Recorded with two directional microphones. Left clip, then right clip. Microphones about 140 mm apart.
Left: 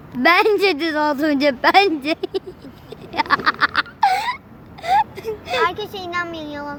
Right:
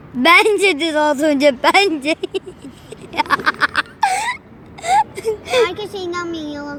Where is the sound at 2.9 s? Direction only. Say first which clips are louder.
Right 1 dB; 10° right (ahead or behind).